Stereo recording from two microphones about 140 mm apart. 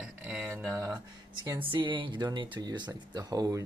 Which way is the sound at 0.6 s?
20° right (ahead or behind).